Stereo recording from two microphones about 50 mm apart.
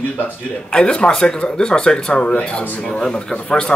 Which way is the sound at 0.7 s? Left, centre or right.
Centre.